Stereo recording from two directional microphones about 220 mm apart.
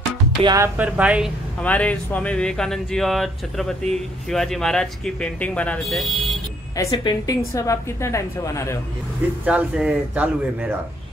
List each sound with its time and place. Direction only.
0.4 s speech: 20° right (ahead or behind)
0.7 s speech: 5° right (ahead or behind)
1.6 s speech: 5° left (ahead or behind)
6.8 s a woman's voice: 20° left (ahead or behind)
9.5 s speech: 5° right (ahead or behind)